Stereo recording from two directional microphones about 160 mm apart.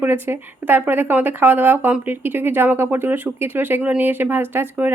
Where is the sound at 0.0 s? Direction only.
15° right (ahead or behind).